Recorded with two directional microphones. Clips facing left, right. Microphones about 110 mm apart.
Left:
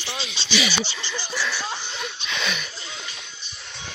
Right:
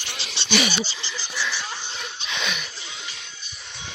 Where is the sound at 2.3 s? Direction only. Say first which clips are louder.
Even; 15° right (ahead or behind).